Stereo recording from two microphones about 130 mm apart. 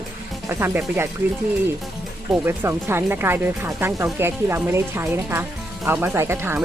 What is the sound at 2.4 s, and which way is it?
Speech, 20° right (ahead or behind).